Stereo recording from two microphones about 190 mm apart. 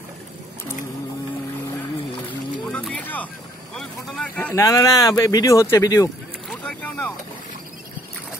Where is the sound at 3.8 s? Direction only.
5° left (ahead or behind).